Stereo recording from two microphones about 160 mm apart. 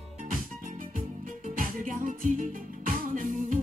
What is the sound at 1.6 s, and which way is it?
Music, 55° right (ahead or behind).